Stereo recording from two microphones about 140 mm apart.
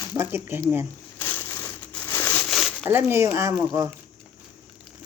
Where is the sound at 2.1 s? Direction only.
15° left (ahead or behind).